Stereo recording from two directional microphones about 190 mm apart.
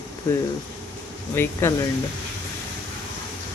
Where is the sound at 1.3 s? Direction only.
10° left (ahead or behind).